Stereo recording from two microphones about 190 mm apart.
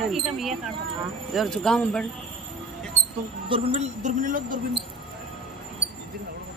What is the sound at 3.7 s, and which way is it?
Speech, 40° right (ahead or behind).